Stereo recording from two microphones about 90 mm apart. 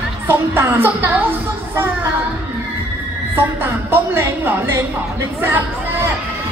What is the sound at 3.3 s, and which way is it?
A woman's voice, 25° right (ahead or behind).